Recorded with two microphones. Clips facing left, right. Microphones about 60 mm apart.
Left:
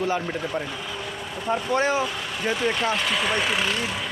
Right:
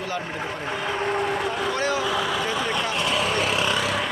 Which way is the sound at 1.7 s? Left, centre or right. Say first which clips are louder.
Left 6 dB; left.